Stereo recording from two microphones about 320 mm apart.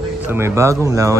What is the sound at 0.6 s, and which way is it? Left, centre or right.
Speech, centre.